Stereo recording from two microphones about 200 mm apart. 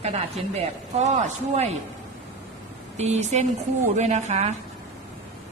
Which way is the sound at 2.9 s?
35° right (ahead or behind).